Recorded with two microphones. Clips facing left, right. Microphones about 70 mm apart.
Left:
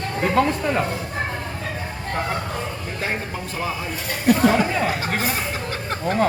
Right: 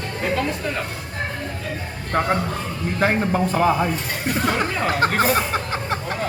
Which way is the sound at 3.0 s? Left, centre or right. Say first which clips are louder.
Right 9 dB; right.